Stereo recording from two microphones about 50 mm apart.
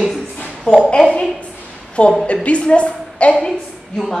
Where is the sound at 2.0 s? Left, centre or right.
Left.